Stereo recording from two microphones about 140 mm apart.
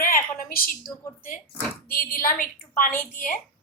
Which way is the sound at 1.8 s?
90° left.